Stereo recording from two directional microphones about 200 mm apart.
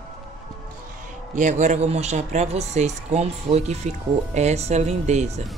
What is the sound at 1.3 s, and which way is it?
Speech, 40° right (ahead or behind).